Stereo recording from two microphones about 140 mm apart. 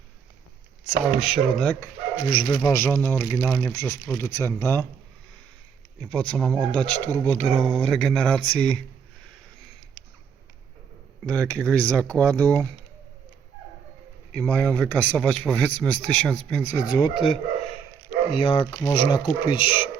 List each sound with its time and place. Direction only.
1.2 s speech: centre (ahead or behind)
2.5 s a man's voice: 25° left (ahead or behind)
6.0 s a man's voice: 5° left (ahead or behind)
7.4 s speech: centre (ahead or behind)
11.3 s a man's voice: 5° left (ahead or behind)
14.3 s a man's voice: 10° left (ahead or behind)
16.8 s speech: 30° left (ahead or behind)